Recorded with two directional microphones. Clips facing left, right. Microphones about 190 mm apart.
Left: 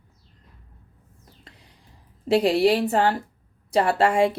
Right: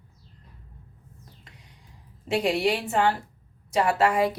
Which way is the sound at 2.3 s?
35° left (ahead or behind).